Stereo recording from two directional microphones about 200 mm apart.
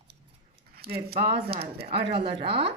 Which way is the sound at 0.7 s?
50° right (ahead or behind).